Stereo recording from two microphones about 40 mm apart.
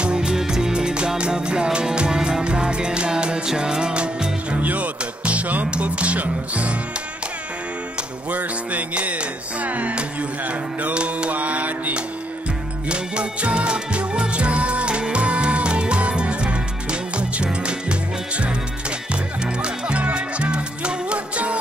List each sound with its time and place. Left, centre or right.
0.0 s music: right
4.6 s music: right
8.3 s music: right
12.8 s music: right